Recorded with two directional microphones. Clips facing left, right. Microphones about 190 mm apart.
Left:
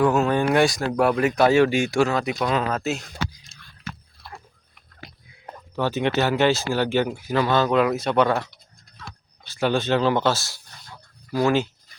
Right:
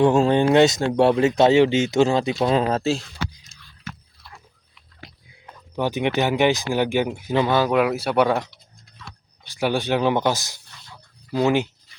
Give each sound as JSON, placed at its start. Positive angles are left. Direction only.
{"t": 0.0, "sound": "speech", "side_deg": -25}
{"t": 4.2, "sound": "biting", "side_deg": 50}
{"t": 5.7, "sound": "speech", "side_deg": -15}